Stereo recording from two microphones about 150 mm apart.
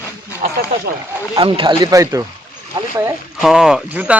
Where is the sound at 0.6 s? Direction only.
90° right.